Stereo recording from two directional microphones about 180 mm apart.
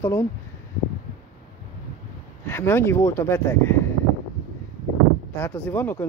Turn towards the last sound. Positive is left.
turn(degrees=10)  # may be behind; listen again after turning